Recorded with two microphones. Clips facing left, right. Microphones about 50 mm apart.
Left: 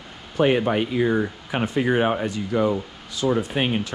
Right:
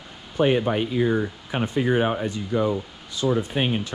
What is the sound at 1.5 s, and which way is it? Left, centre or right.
Speech, left.